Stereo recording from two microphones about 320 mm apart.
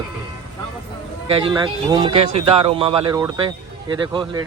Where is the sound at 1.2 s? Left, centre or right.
Centre.